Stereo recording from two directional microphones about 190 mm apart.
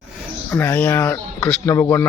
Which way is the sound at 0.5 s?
10° left (ahead or behind).